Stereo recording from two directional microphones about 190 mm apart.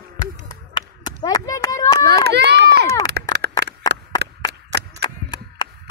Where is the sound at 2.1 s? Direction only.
60° right (ahead or behind).